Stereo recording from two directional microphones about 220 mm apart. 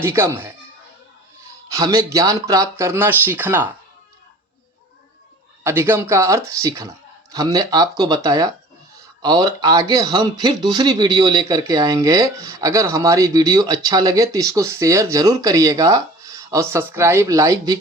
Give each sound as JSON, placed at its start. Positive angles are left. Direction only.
{"t": 0.0, "sound": "a man's voice", "side_deg": -10}
{"t": 1.7, "sound": "a man's voice", "side_deg": -15}
{"t": 5.6, "sound": "a man's voice", "side_deg": -10}